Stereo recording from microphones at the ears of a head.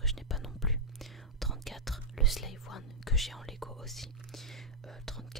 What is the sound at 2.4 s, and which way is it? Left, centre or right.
Whispering, left.